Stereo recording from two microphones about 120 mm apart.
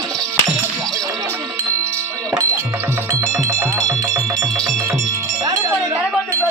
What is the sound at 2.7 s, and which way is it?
Cowbell, 20° right (ahead or behind).